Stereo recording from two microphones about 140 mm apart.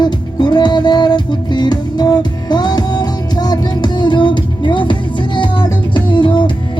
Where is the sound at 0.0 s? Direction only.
35° left (ahead or behind).